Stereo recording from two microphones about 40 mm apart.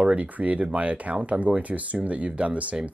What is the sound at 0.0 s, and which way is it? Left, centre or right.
Speech, right.